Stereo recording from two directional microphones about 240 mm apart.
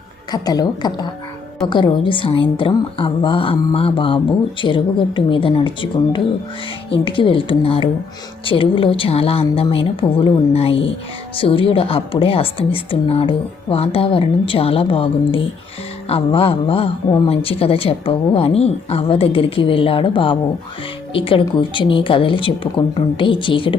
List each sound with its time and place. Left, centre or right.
0.3 s a woman's voice: centre